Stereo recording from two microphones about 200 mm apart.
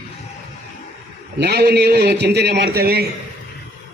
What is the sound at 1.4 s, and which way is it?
A man's voice, 55° right (ahead or behind).